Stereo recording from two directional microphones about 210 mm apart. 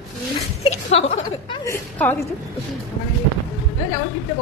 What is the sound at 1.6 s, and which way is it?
Speech, 10° left (ahead or behind).